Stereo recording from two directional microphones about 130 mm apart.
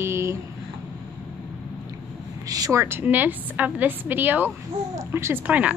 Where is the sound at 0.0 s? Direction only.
20° right (ahead or behind).